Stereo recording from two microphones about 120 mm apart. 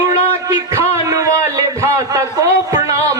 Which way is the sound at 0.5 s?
25° right (ahead or behind).